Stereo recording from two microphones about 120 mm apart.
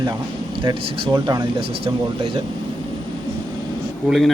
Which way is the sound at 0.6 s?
40° right (ahead or behind).